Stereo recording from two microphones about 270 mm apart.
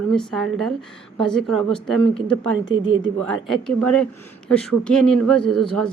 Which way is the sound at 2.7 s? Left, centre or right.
Right.